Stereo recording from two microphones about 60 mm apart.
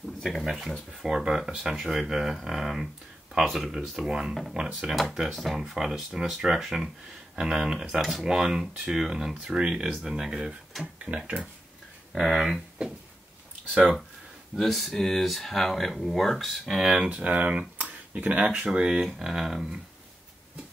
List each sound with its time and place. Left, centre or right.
0.2 s speech: centre
1.0 s speech: centre
4.8 s speech: centre
10.8 s speech: centre
12.1 s speech: centre
14.5 s speech: centre
17.1 s speech: right
18.4 s speech: centre